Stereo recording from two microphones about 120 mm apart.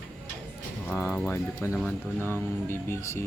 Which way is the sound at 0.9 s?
20° left (ahead or behind).